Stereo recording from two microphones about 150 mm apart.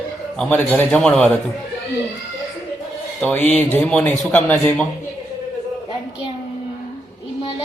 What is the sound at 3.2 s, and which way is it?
Speech, 10° left (ahead or behind).